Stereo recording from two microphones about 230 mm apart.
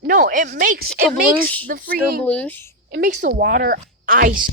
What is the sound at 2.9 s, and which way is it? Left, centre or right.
Speech, right.